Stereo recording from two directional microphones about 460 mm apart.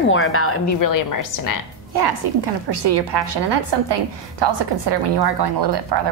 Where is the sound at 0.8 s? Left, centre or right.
Left.